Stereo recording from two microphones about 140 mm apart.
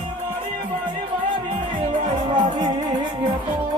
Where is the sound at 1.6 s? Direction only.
35° right (ahead or behind).